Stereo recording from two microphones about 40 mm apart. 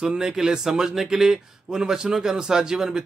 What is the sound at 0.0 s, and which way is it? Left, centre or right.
Speech, centre.